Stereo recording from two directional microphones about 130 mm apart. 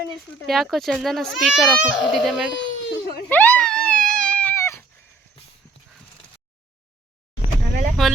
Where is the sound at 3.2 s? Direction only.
10° left (ahead or behind).